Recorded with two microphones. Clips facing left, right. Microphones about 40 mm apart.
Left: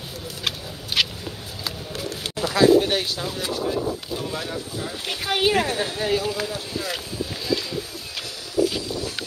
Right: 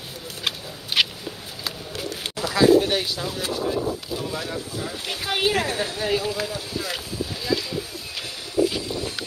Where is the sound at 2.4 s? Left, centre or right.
Centre.